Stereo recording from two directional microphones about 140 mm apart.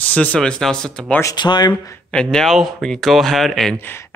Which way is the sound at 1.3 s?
30° left (ahead or behind).